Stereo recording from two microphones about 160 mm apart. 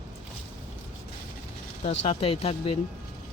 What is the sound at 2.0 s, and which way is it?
Speech, 40° left (ahead or behind).